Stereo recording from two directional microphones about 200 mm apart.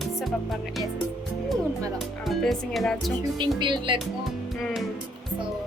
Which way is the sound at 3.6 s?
25° right (ahead or behind).